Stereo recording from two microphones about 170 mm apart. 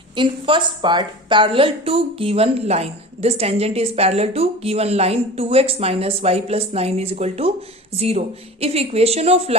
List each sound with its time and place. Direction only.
0.2 s a woman's voice: 30° right (ahead or behind)